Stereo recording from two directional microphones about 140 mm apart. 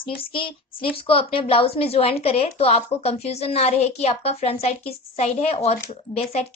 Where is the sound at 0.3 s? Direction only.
40° left (ahead or behind).